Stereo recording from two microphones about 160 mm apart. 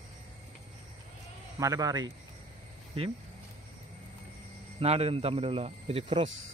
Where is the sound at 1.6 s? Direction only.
20° right (ahead or behind).